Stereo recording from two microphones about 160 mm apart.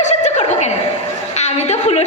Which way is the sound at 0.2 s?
45° left (ahead or behind).